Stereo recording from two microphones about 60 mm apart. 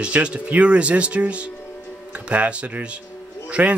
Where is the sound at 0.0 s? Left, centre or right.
Centre.